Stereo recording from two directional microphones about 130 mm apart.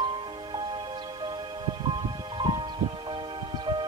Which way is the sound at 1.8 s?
35° right (ahead or behind).